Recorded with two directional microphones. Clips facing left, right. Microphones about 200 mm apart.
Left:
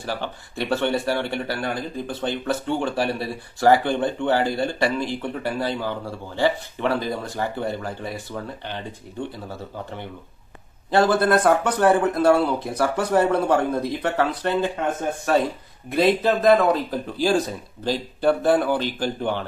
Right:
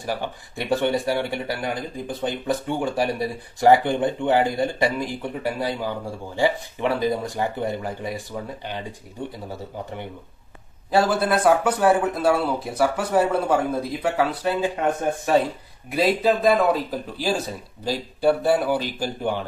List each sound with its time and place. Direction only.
0.0 s speech: 15° right (ahead or behind)
10.9 s speech: 5° right (ahead or behind)
15.9 s speech: 5° right (ahead or behind)